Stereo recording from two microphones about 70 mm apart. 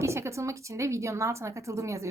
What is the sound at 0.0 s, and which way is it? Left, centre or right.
A woman's voice, right.